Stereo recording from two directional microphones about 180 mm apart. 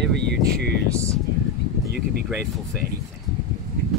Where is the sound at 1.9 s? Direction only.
60° right (ahead or behind).